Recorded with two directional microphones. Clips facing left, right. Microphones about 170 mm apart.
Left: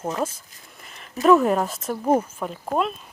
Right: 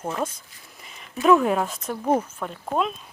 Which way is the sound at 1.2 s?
Centre (ahead or behind).